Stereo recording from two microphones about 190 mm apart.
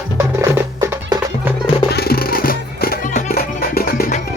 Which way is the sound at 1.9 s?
55° left (ahead or behind).